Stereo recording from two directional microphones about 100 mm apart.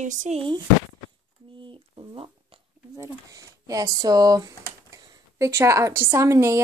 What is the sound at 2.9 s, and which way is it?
Typing, 35° right (ahead or behind).